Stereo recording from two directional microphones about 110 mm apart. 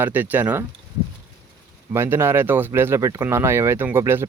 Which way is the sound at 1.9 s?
20° right (ahead or behind).